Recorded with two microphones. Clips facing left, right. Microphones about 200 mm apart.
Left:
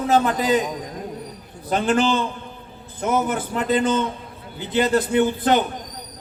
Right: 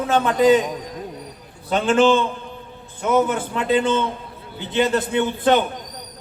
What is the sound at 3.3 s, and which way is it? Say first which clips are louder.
A man's voice: right 1 dB; 40° left (ahead or behind).